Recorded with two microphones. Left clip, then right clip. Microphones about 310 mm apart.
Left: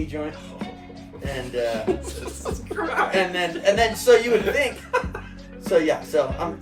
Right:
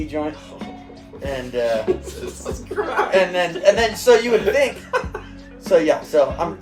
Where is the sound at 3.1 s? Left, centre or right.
Centre.